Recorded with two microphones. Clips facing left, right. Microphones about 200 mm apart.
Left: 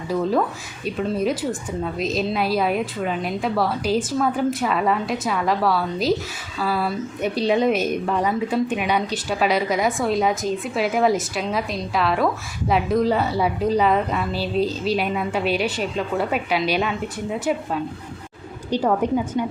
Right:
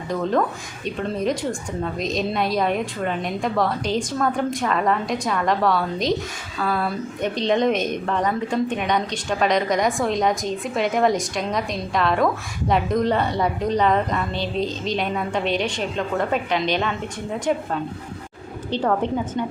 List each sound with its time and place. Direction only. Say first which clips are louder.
0.1 s a woman's voice: left 1 dB; 5° left (ahead or behind)
18.7 s a woman's voice: left 2 dB; 10° left (ahead or behind)